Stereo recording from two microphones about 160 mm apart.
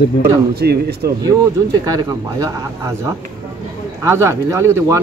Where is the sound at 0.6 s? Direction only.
80° right.